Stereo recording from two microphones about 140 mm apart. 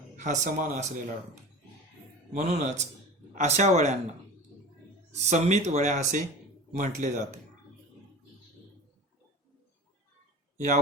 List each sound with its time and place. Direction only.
0.2 s speech: 60° right (ahead or behind)
2.3 s speech: 55° right (ahead or behind)
5.3 s speech: 55° right (ahead or behind)